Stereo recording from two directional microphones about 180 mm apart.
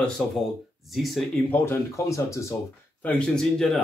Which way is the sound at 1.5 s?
15° left (ahead or behind).